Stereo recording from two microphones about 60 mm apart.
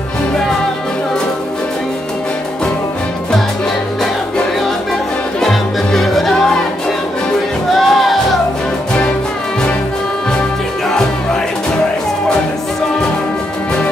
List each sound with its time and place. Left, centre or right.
5.4 s music: centre
7.7 s music: centre